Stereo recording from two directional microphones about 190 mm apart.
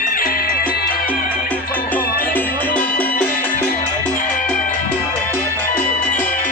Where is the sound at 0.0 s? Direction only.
45° left (ahead or behind).